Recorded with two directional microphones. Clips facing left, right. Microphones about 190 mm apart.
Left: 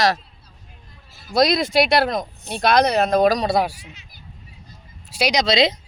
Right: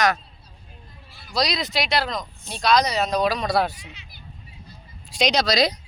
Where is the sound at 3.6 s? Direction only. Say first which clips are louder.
Left 1 dB; 10° left (ahead or behind).